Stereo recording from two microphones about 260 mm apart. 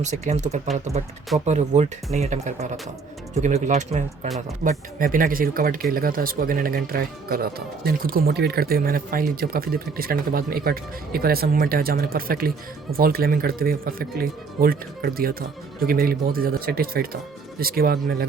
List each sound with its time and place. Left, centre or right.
0.0 s speech: right